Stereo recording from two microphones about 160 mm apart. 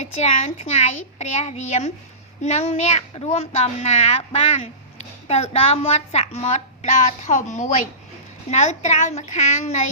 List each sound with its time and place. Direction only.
0.0 s a child's voice: 45° left (ahead or behind)